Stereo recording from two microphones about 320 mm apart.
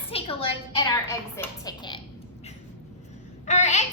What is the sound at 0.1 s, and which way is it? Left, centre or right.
A woman's voice, centre.